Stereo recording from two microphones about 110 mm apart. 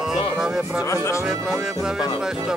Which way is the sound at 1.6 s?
5° right (ahead or behind).